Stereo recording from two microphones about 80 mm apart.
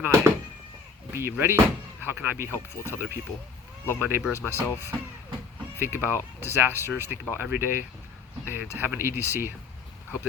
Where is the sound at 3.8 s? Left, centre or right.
Left.